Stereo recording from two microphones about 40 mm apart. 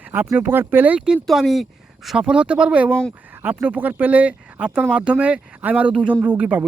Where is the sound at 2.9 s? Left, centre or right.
Left.